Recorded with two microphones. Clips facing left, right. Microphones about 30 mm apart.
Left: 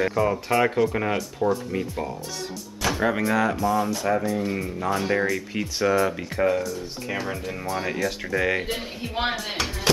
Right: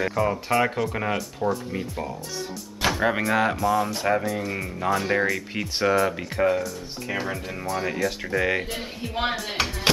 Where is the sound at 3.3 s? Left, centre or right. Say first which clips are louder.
Even; right.